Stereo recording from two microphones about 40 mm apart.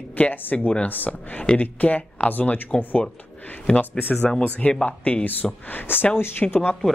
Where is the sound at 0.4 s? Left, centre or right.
Left.